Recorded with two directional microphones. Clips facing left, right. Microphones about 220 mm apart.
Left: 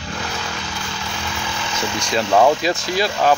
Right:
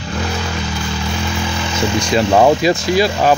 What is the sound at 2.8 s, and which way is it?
Speech, 5° right (ahead or behind).